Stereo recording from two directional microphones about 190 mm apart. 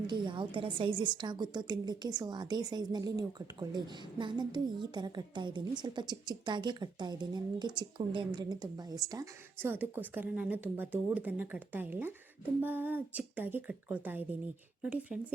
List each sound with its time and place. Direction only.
0.1 s a woman's voice: 25° right (ahead or behind); by 15.2 s 5° right (ahead or behind)